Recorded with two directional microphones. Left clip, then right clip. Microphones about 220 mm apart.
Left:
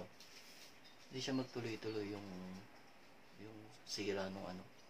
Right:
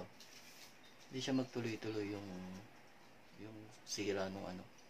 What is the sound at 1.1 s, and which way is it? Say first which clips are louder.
Speech: right 3 dB; 20° right (ahead or behind).